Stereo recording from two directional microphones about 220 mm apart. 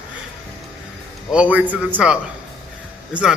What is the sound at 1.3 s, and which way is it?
A man's voice, 5° right (ahead or behind).